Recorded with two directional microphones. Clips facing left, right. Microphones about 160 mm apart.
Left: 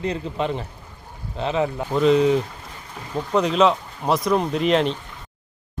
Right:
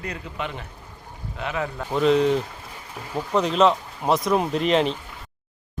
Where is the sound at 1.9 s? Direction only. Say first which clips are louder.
Left 1 dB; centre (ahead or behind).